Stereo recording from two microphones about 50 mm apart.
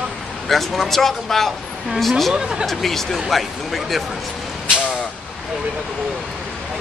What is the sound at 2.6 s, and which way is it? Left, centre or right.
Speech, centre.